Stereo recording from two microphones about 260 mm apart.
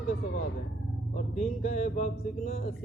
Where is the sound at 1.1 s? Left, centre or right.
Left.